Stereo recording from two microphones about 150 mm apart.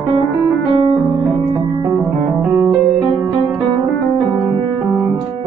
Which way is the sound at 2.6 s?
10° right (ahead or behind).